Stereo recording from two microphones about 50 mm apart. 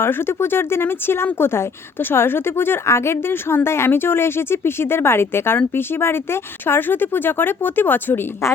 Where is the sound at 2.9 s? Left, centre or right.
Left.